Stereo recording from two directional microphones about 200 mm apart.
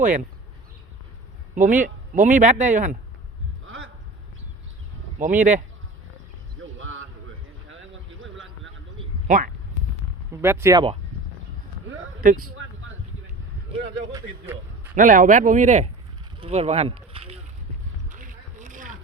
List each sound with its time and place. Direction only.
1.5 s speech: 40° right (ahead or behind)
5.4 s speech: 40° right (ahead or behind)
6.7 s a sound: 75° right (ahead or behind)
9.2 s speech: 40° right (ahead or behind)
10.4 s speech: 10° right (ahead or behind)
12.2 s speech: 45° right (ahead or behind)
14.1 s speech: 15° right (ahead or behind)
14.9 s speech: 40° right (ahead or behind)
16.4 s rowboat: 30° right (ahead or behind)
18.1 s boat: 40° right (ahead or behind)